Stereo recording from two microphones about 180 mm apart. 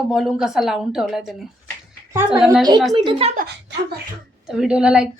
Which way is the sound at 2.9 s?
30° right (ahead or behind).